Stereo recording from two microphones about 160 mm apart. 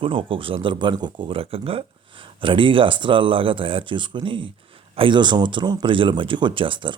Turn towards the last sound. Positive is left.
turn(degrees=-30)  # may be behind; listen again after turning